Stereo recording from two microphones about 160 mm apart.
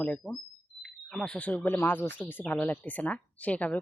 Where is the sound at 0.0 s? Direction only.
5° left (ahead or behind).